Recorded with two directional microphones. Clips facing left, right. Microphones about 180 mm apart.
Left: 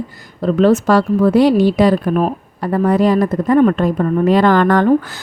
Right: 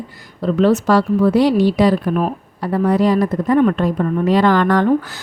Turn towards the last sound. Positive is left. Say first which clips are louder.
# left 2 dB
turn(degrees=50)  # may be behind; listen again after turning